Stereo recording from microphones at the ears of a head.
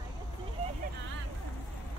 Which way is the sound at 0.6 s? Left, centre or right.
Right.